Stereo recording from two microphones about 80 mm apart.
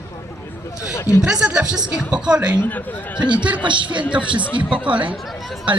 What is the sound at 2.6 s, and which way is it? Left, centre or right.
Speech, left.